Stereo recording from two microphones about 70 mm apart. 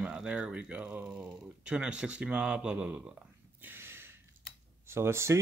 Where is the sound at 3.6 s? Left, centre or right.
Right.